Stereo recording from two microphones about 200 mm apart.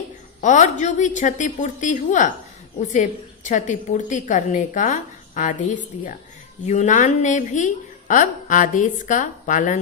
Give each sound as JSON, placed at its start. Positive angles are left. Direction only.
{"t": 0.4, "sound": "a woman's voice", "side_deg": 35}